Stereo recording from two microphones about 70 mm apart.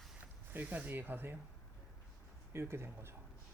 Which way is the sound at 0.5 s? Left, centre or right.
Right.